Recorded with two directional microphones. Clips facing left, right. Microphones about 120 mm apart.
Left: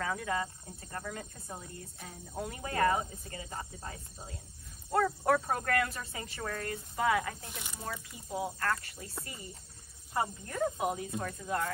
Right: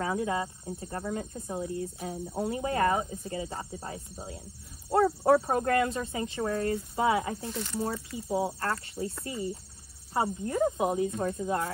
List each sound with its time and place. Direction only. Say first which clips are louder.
0.0 s speech: right 4 dB; 20° right (ahead or behind)
1.5 s speech: right 15 dB; 10° right (ahead or behind)
2.5 s speech: right 2 dB; 25° right (ahead or behind)
5.0 s speech: right 7 dB; 30° right (ahead or behind)
7.4 s speech: right 11 dB; 15° left (ahead or behind)
8.1 s speech: right 6 dB; 25° right (ahead or behind)